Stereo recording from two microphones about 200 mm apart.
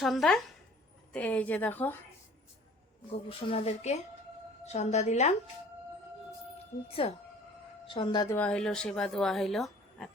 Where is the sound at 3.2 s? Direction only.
30° left (ahead or behind).